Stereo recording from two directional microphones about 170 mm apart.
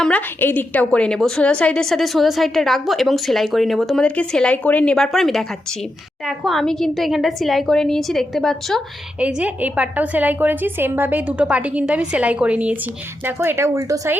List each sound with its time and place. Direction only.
0.0 s a woman's voice: 10° left (ahead or behind)
9.2 s a woman's voice: 10° right (ahead or behind)